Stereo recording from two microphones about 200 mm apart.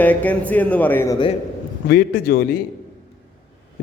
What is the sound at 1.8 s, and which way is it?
Speech, 50° left (ahead or behind).